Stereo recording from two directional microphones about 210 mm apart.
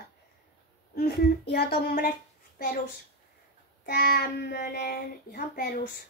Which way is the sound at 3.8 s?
45° left (ahead or behind).